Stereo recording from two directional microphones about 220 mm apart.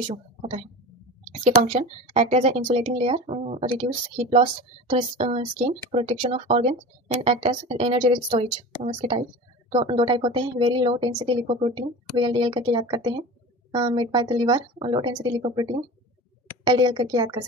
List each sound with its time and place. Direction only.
0.1 s speech: 25° right (ahead or behind)
1.7 s speech: 30° right (ahead or behind)